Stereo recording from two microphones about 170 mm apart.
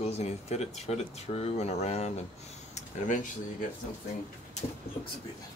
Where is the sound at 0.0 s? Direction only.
40° left (ahead or behind).